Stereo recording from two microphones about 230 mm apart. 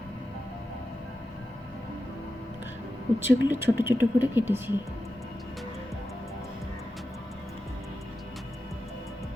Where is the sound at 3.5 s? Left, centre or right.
Centre.